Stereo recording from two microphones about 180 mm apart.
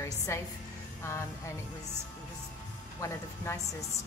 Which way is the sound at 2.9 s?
15° left (ahead or behind).